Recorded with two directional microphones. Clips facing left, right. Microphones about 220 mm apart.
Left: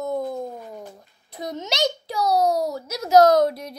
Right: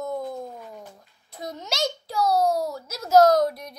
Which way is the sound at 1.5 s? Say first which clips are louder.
Left 4 dB; 20° left (ahead or behind).